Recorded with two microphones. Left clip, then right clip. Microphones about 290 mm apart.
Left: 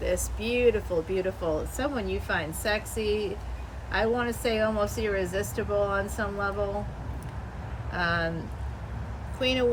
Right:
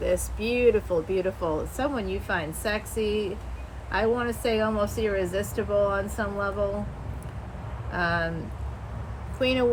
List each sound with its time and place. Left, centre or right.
0.0 s speech: centre
7.9 s speech: centre
9.4 s speech: centre